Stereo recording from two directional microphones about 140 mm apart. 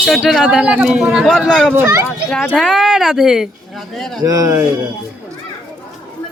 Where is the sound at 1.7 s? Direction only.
20° right (ahead or behind).